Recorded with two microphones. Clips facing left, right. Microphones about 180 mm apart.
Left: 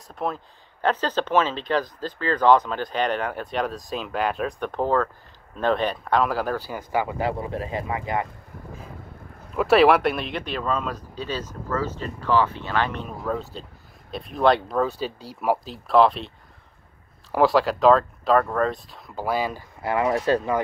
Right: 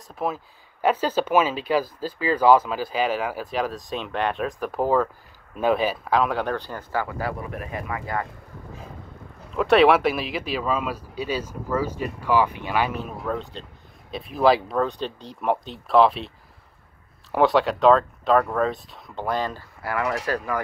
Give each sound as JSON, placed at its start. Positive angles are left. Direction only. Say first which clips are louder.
{"t": 0.1, "sound": "speech", "louder": "right 1 dB", "side_deg": -5}
{"t": 9.6, "sound": "speech", "louder": "even", "side_deg": 0}
{"t": 17.3, "sound": "speech", "louder": "even", "side_deg": 0}
{"t": 19.8, "sound": "speech", "louder": "left 4 dB", "side_deg": 25}